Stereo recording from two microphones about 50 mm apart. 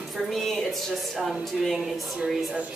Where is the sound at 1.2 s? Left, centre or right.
Centre.